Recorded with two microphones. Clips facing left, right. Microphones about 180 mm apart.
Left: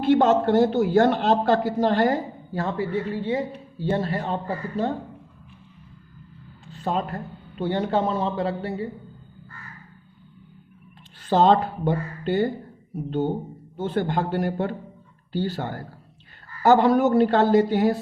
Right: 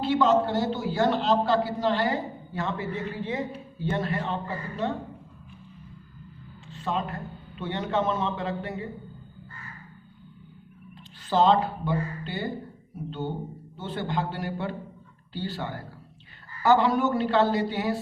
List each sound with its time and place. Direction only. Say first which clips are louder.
0.0 s a man's voice: left 4 dB; 50° left (ahead or behind)
6.7 s a man's voice: left 4 dB; 40° left (ahead or behind)
11.3 s a man's voice: left 3 dB; 50° left (ahead or behind)
13.7 s a man's voice: left 6 dB; 50° left (ahead or behind)